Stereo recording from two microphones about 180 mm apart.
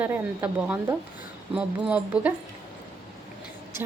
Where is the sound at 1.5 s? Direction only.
5° right (ahead or behind).